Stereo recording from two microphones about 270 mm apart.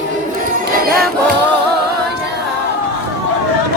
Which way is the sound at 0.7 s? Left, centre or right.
Right.